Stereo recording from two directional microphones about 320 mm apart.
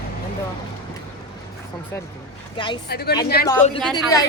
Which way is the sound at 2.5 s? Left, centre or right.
Centre.